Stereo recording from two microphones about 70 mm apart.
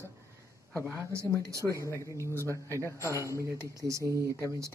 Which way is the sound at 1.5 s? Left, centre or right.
Right.